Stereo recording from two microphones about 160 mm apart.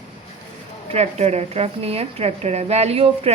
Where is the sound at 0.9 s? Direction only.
45° right (ahead or behind).